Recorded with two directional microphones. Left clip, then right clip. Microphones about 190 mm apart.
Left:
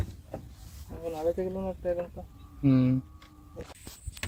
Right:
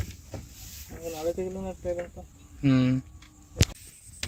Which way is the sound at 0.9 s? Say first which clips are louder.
Left 2 dB; 25° left (ahead or behind).